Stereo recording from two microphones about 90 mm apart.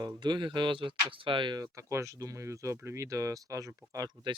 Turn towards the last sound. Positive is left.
turn(degrees=-40)  # may be behind; listen again after turning